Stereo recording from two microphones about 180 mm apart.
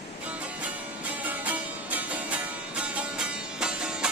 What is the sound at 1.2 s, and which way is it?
Music, 10° right (ahead or behind).